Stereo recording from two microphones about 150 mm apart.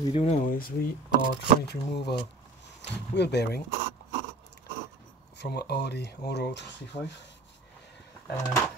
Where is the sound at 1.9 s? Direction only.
90° left.